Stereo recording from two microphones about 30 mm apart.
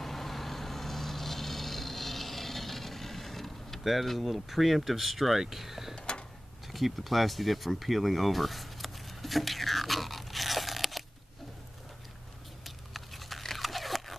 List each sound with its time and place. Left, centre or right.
0.0 s vehicle: centre
5.4 s speech: centre
5.9 s tick-tock: left
6.7 s a sound: centre
12.6 s biting: centre